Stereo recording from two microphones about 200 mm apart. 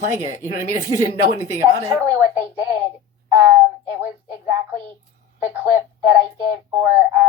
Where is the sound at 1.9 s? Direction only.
15° right (ahead or behind).